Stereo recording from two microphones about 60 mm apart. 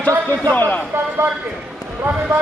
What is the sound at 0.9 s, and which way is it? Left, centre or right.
Speech, right.